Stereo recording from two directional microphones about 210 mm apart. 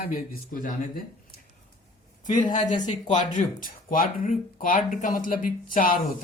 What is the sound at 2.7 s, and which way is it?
Speech, 35° left (ahead or behind).